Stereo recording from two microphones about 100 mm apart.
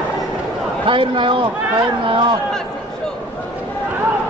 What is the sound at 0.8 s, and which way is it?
A man's voice, 60° right (ahead or behind).